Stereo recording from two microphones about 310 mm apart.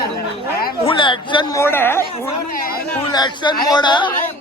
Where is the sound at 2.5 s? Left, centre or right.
Left.